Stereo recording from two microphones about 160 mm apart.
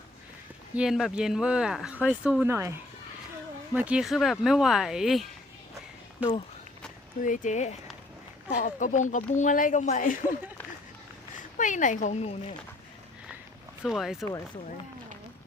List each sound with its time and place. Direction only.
0.8 s speech: 5° right (ahead or behind)
3.8 s speech: 5° right (ahead or behind)
7.2 s speech: 55° left (ahead or behind)
11.5 s speech: 55° left (ahead or behind)
13.8 s speech: centre (ahead or behind)